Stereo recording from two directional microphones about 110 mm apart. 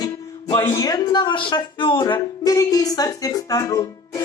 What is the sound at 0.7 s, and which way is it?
A woman's voice, 35° left (ahead or behind).